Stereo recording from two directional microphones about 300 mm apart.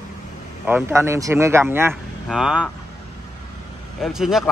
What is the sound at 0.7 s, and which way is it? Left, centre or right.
Speech, centre.